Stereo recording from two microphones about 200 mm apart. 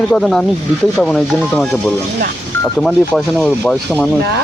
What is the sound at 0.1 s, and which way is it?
Speech, centre (ahead or behind).